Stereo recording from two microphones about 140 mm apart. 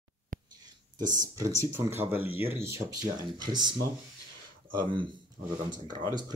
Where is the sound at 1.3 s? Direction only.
20° right (ahead or behind).